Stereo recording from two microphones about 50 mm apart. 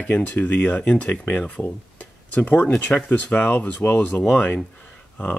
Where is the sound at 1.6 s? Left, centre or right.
Left.